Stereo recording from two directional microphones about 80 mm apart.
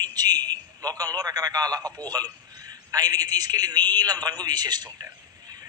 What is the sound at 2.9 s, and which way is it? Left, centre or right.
A man's voice, right.